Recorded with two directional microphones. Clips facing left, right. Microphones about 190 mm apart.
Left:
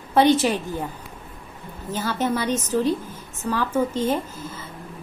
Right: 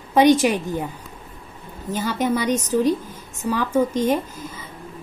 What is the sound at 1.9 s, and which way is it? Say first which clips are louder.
A woman's voice: right 2 dB; 15° right (ahead or behind).